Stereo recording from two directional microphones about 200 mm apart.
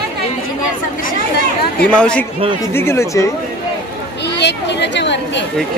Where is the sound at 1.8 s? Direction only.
5° left (ahead or behind).